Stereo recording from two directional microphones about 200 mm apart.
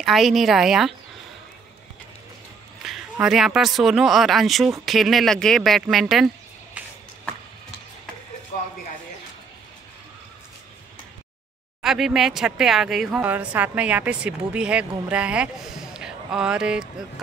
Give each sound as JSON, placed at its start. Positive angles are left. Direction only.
{"t": 0.0, "sound": "speech", "side_deg": 0}
{"t": 2.8, "sound": "speech", "side_deg": 0}
{"t": 11.8, "sound": "speech", "side_deg": 0}